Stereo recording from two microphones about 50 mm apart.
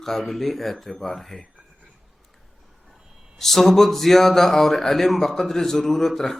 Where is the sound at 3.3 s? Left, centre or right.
Centre.